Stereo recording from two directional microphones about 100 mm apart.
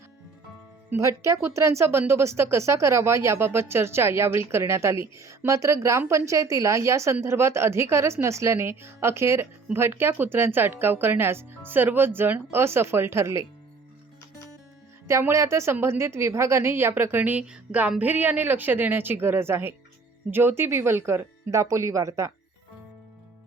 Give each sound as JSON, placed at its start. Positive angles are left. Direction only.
{"t": 0.9, "sound": "a woman's voice", "side_deg": -30}
{"t": 15.0, "sound": "a woman's voice", "side_deg": -30}